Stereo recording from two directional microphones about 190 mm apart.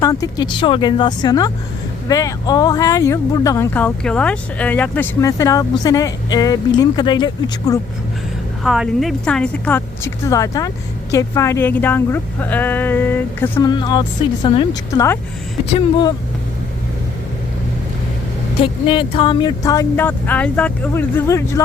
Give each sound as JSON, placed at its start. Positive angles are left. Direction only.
{"t": 0.0, "sound": "speech", "side_deg": 20}
{"t": 8.6, "sound": "speech", "side_deg": 0}
{"t": 13.7, "sound": "speech", "side_deg": 20}
{"t": 18.6, "sound": "speech", "side_deg": 25}